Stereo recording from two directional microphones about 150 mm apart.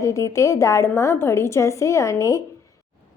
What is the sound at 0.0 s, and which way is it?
A woman's voice, 20° left (ahead or behind).